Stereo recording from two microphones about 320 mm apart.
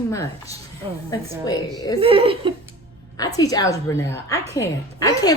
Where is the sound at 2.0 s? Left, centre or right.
Centre.